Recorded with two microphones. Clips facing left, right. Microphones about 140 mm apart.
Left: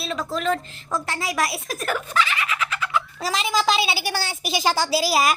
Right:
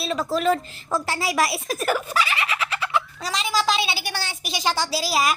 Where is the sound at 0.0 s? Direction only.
Centre (ahead or behind).